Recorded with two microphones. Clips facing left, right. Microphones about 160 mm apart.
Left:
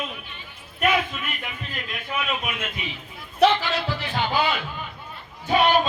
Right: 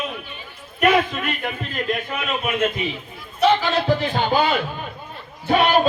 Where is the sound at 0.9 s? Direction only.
60° right (ahead or behind).